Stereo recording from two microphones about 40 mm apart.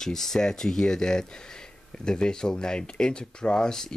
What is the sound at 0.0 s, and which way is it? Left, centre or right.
Speech, centre.